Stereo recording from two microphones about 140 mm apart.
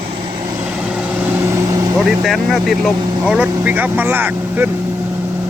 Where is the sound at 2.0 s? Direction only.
Centre (ahead or behind).